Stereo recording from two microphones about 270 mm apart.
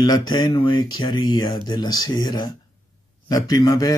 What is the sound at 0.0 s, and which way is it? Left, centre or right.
A man's voice, centre.